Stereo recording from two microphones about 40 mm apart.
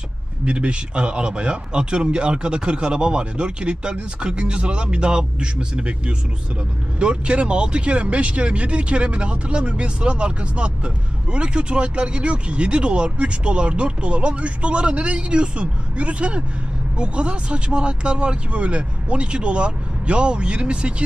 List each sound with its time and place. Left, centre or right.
0.5 s speech: right